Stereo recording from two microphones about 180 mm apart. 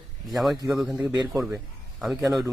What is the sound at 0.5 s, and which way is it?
Speech, 20° right (ahead or behind).